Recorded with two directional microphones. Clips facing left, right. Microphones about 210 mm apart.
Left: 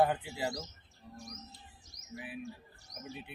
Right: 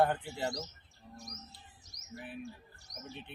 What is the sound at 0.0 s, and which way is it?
Speech, 5° left (ahead or behind).